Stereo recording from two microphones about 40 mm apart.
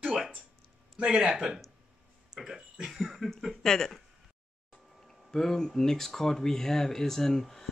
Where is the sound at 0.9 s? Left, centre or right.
Centre.